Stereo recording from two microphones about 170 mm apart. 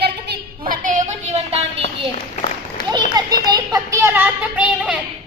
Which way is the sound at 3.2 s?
20° right (ahead or behind).